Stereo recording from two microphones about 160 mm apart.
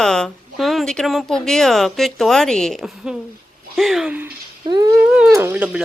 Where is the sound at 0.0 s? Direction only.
5° left (ahead or behind).